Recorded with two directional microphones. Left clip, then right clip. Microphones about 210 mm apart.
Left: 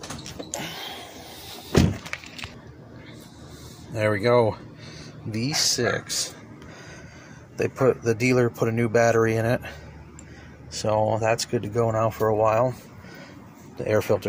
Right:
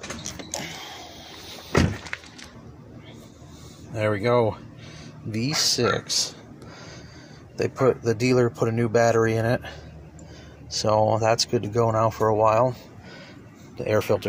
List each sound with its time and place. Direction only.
0.6 s a sound: 5° left (ahead or behind)
3.9 s speech: centre (ahead or behind)
5.3 s speech: 10° right (ahead or behind)
7.5 s speech: centre (ahead or behind)
10.8 s speech: 10° right (ahead or behind)
13.7 s speech: centre (ahead or behind)